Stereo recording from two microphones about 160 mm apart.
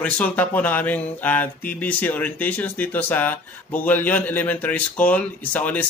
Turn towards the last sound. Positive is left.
turn(degrees=10)  # may be behind; listen again after turning